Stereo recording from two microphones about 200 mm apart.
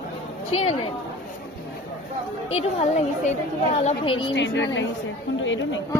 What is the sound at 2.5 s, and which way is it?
A woman's voice, 30° left (ahead or behind).